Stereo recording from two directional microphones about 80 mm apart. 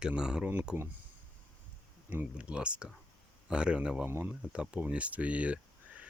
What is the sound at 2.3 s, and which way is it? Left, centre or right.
Speech, centre.